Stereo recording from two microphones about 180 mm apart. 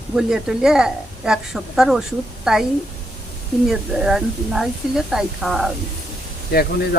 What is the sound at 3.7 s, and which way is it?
A woman's voice, centre (ahead or behind).